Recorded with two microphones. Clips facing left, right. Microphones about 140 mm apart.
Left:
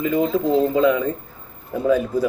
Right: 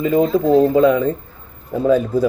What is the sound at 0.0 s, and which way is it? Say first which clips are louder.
Speech: right 4 dB; 30° right (ahead or behind).